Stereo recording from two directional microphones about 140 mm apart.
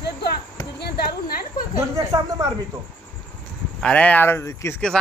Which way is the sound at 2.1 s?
25° right (ahead or behind).